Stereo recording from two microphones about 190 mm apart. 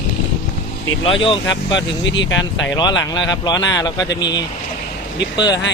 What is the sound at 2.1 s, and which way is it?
Speech, 70° left (ahead or behind).